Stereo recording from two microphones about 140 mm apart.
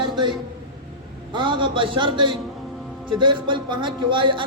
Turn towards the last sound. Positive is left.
turn(degrees=-35)  # may be behind; listen again after turning